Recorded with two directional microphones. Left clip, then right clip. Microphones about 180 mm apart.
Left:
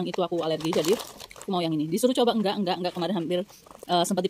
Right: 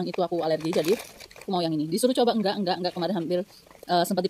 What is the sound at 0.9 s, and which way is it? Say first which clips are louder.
Crumpling: even; 30° left (ahead or behind).